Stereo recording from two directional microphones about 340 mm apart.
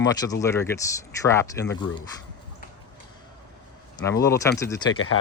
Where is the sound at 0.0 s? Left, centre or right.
Centre.